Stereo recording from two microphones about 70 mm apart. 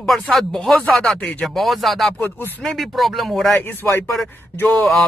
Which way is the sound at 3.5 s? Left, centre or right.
Left.